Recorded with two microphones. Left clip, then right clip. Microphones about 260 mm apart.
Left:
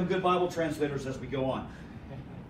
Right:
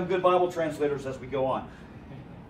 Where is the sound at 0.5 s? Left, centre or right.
Right.